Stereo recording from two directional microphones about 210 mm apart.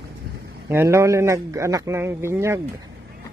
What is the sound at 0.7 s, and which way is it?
A man's voice, 10° right (ahead or behind).